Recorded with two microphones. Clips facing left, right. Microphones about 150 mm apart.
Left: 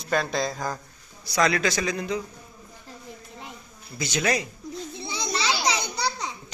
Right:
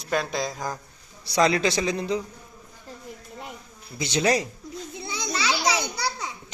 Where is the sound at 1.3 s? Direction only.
30° right (ahead or behind).